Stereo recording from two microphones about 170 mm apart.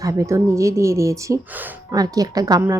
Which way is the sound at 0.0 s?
20° right (ahead or behind).